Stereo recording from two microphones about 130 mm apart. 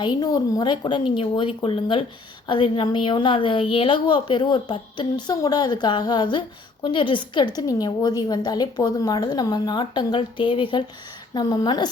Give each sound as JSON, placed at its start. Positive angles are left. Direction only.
{"t": 0.0, "sound": "a woman's voice", "side_deg": 35}